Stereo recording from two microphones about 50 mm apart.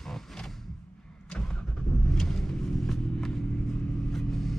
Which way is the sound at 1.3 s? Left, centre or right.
Centre.